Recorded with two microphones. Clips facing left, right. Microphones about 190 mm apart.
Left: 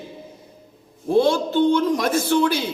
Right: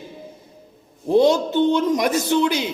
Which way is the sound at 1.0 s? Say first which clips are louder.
Right 2 dB; 20° right (ahead or behind).